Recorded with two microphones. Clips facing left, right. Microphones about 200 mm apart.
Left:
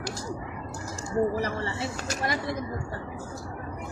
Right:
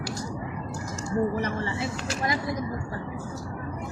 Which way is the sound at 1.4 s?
35° left (ahead or behind).